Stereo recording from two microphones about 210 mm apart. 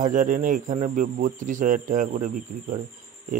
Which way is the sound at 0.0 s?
40° right (ahead or behind).